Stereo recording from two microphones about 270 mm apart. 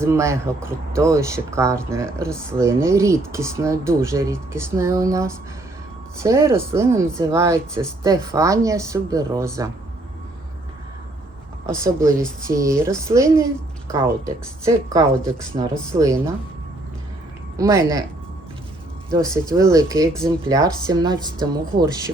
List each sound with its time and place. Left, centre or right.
0.0 s speech: centre
11.6 s speech: centre
17.6 s speech: centre
19.1 s speech: centre
20.1 s speech: centre
20.8 s speech: centre